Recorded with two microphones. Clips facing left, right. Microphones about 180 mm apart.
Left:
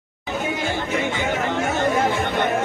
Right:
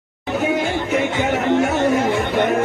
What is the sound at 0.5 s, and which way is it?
Music, 55° right (ahead or behind).